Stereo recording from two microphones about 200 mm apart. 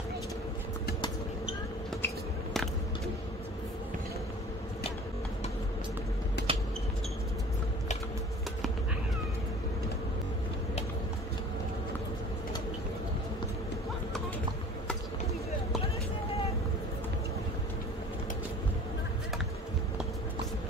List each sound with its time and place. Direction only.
6.4 s vehicle: 55° left (ahead or behind)